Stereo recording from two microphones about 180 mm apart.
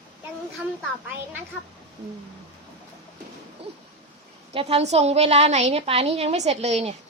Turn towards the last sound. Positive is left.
turn(degrees=-35)  # may be behind; listen again after turning